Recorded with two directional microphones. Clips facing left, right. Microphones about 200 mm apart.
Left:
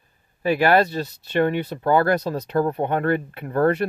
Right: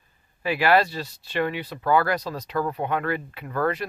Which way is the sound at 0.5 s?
50° left (ahead or behind).